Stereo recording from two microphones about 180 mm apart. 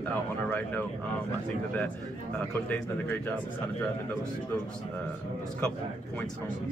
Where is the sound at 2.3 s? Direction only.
10° left (ahead or behind).